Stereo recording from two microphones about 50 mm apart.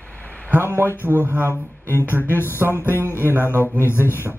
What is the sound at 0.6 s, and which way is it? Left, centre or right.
Speech, right.